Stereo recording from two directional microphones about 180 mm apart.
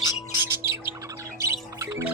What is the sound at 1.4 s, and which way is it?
Music, 15° right (ahead or behind).